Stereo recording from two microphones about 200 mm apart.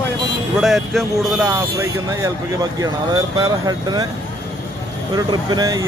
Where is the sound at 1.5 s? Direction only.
15° right (ahead or behind).